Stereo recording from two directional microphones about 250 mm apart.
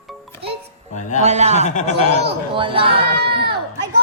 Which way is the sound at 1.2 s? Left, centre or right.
Right.